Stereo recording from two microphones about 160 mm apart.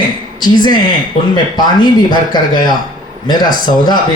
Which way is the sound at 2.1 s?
25° left (ahead or behind).